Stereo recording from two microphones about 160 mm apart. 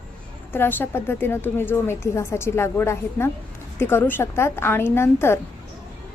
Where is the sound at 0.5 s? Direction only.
15° left (ahead or behind).